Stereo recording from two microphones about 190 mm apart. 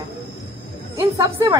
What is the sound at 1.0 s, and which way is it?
Speech, 15° right (ahead or behind).